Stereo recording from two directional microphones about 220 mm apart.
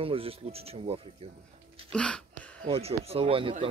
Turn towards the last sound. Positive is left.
turn(degrees=-25)  # may be behind; listen again after turning